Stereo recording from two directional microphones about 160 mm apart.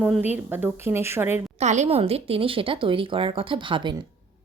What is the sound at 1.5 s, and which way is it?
Speech, 45° right (ahead or behind).